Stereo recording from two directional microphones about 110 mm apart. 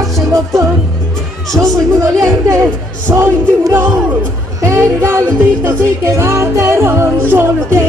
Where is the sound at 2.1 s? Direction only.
30° right (ahead or behind).